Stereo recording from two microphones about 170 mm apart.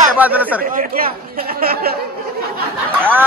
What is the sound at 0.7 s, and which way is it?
Speech, 55° right (ahead or behind).